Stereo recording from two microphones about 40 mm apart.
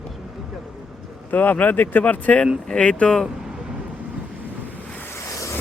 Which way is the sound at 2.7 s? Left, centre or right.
Left.